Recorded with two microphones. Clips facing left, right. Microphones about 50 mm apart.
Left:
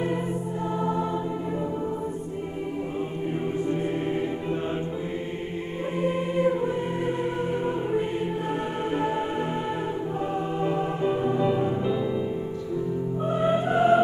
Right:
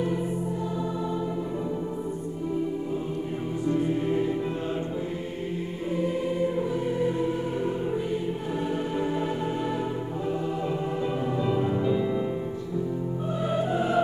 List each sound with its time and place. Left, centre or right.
0.7 s music: left
3.6 s music: left
5.9 s music: left
11.2 s music: left
13.3 s music: left
13.7 s music: left